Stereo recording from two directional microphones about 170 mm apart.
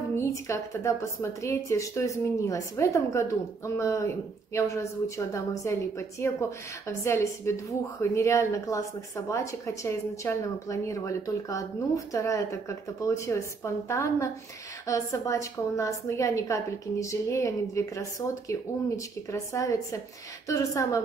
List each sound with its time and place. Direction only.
0.1 s speech: 15° left (ahead or behind)
19.3 s a woman's voice: 20° left (ahead or behind)